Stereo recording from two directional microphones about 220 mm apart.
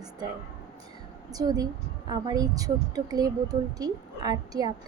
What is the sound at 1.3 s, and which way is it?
A woman's voice, 15° right (ahead or behind).